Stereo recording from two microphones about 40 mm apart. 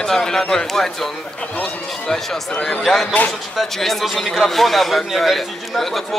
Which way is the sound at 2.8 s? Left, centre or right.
Centre.